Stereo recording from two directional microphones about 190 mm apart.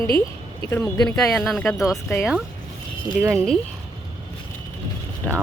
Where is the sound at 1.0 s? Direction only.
Centre (ahead or behind).